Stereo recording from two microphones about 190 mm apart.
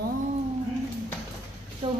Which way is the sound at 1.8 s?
30° right (ahead or behind).